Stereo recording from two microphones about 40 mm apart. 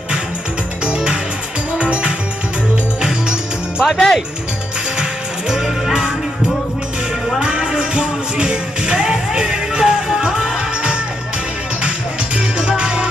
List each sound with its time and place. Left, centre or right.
0.8 s music: right
3.8 s speech: centre
7.3 s music: right
12.4 s music: right